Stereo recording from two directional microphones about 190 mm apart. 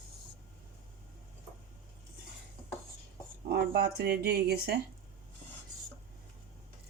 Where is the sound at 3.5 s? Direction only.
55° right (ahead or behind).